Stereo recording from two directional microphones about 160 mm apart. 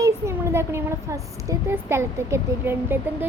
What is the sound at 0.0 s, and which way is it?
A child's voice, 15° right (ahead or behind).